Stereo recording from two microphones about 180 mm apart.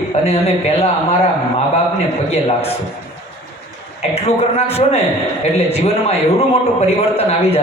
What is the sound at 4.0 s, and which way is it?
A man's voice, 35° left (ahead or behind).